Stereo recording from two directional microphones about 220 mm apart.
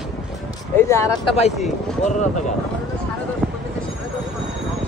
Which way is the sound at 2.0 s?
30° left (ahead or behind).